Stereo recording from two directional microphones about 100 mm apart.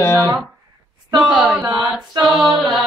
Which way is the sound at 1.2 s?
10° right (ahead or behind).